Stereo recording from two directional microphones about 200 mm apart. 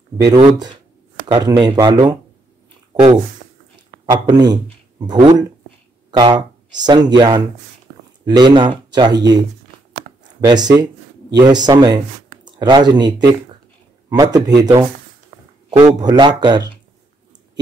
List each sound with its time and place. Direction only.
0.2 s speech: 20° right (ahead or behind)
2.9 s a sound: 20° right (ahead or behind)
4.0 s speech: 20° right (ahead or behind)
10.4 s speech: 20° right (ahead or behind)